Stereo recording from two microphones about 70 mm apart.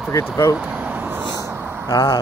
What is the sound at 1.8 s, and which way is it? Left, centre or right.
Speech, left.